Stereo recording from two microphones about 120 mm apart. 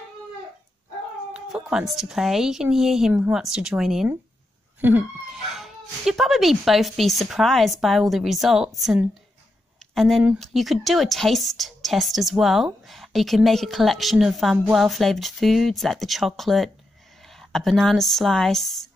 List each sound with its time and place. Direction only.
1.3 s a woman's voice: 5° right (ahead or behind)
4.7 s a sound: 15° right (ahead or behind)
5.3 s a woman's voice: centre (ahead or behind)